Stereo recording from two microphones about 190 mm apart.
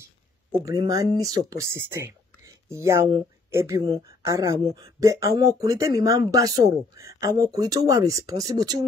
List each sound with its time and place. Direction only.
0.5 s speech: 20° right (ahead or behind)